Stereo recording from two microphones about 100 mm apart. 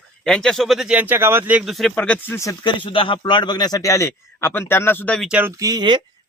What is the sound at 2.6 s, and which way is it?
A man's voice, 60° left (ahead or behind).